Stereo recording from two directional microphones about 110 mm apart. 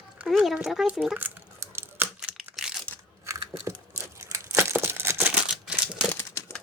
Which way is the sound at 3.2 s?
30° right (ahead or behind).